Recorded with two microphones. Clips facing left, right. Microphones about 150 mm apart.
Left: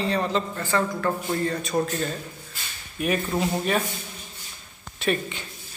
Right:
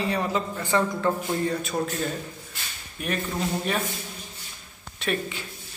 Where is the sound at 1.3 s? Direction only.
5° right (ahead or behind).